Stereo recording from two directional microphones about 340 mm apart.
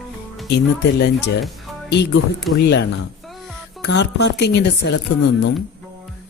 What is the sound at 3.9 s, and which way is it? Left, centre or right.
Speech, left.